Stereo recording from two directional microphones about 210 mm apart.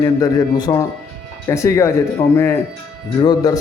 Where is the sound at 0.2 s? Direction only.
20° left (ahead or behind).